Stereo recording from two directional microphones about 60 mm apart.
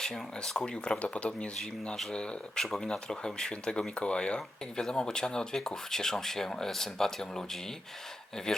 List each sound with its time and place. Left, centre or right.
0.0 s speech: centre